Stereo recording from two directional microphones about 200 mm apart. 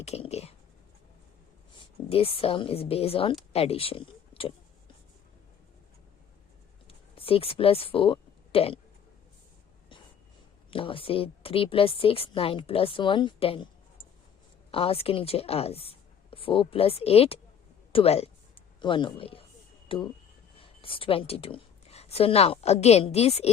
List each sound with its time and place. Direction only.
0.0 s whispering: 30° left (ahead or behind)
1.8 s a woman's voice: 30° left (ahead or behind)
6.8 s a sound: 30° left (ahead or behind)
10.7 s a woman's voice: 25° left (ahead or behind)